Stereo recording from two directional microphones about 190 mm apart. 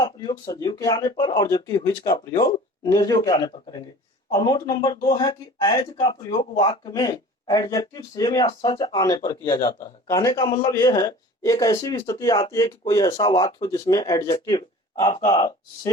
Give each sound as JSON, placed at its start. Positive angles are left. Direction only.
{"t": 0.0, "sound": "speech", "side_deg": 20}